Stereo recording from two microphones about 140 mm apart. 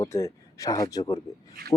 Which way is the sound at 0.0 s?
20° left (ahead or behind).